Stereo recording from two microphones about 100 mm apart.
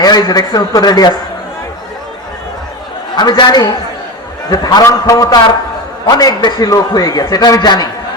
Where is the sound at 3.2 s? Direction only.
45° left (ahead or behind).